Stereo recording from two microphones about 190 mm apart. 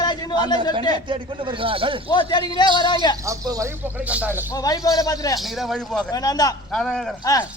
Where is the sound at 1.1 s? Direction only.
25° right (ahead or behind).